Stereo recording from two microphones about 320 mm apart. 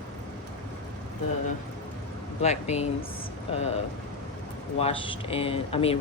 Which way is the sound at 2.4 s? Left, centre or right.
Centre.